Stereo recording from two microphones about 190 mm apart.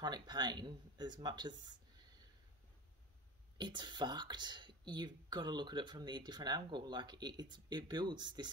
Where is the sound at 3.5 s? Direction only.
25° right (ahead or behind).